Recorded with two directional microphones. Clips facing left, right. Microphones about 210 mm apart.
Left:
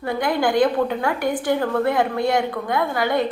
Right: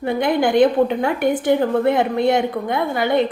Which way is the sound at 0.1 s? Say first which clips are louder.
Right 3 dB; 20° right (ahead or behind).